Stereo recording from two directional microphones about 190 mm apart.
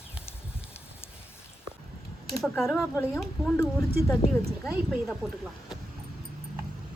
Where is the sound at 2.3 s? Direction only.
Centre (ahead or behind).